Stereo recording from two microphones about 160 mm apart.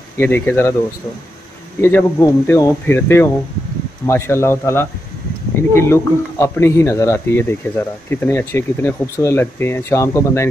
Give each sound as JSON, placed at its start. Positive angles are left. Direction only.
{"t": 0.2, "sound": "speech", "side_deg": 15}
{"t": 1.8, "sound": "speech", "side_deg": 15}